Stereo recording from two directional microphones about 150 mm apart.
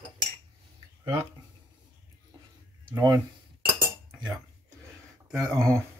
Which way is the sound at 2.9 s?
30° right (ahead or behind).